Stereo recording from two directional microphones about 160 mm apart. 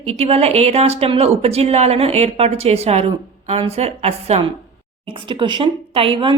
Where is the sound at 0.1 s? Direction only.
40° right (ahead or behind).